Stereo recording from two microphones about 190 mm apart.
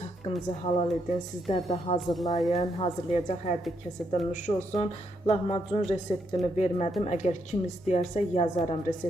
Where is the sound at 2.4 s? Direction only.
35° left (ahead or behind).